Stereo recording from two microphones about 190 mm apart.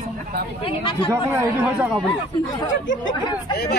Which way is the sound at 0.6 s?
25° left (ahead or behind).